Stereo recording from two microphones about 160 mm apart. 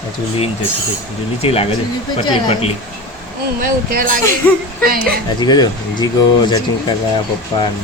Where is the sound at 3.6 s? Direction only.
60° right (ahead or behind).